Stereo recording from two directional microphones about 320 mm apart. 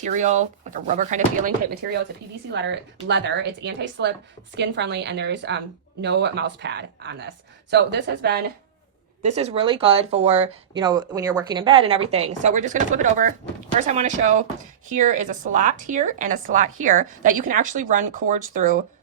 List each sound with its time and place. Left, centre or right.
0.0 s a woman's voice: right
9.2 s a woman's voice: centre